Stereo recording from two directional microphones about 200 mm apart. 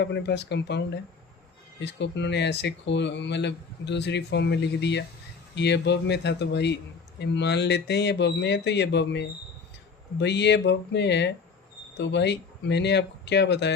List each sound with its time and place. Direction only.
0.0 s speech: 60° left (ahead or behind)